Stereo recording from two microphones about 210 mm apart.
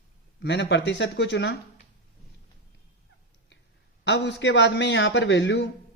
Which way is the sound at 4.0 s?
55° left (ahead or behind).